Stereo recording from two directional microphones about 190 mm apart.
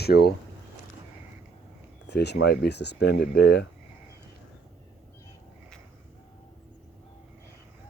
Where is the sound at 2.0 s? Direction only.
60° left (ahead or behind).